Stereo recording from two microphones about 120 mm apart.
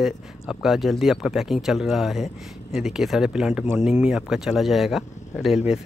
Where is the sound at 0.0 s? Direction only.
5° right (ahead or behind).